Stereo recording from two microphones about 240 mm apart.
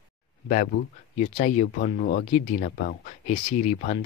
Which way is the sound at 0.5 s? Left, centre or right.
Left.